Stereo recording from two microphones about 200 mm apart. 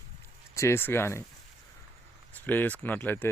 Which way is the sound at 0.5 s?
15° left (ahead or behind).